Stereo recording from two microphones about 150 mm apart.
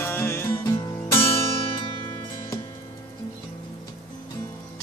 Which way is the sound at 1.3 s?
35° left (ahead or behind).